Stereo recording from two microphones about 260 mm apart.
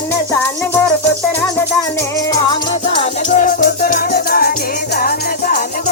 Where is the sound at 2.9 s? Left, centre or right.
Left.